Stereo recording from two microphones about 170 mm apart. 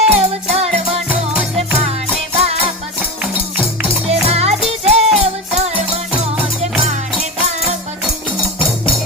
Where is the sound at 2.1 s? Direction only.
35° right (ahead or behind).